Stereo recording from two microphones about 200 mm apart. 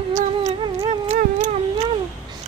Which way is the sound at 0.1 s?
35° right (ahead or behind).